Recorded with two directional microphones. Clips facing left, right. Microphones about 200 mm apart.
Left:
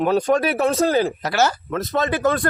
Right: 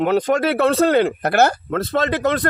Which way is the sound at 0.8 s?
60° right (ahead or behind).